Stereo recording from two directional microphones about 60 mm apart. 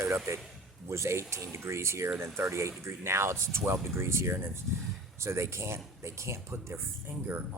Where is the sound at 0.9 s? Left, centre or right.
Right.